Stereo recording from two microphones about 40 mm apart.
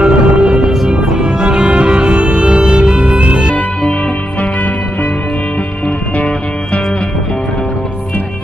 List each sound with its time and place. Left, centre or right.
0.0 s music: right
0.6 s music: centre
1.1 s music: right
6.1 s music: left